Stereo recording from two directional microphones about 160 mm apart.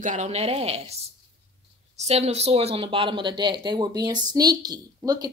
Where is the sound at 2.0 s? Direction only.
40° right (ahead or behind).